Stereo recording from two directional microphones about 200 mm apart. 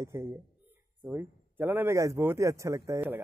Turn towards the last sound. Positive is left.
turn(degrees=-10)  # may be behind; listen again after turning